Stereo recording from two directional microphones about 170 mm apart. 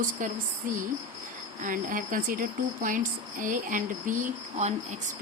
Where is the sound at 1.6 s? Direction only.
50° right (ahead or behind).